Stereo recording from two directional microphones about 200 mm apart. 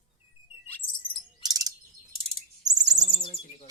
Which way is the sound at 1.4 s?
20° right (ahead or behind).